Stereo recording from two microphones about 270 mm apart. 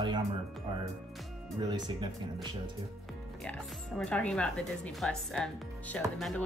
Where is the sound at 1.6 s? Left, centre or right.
Centre.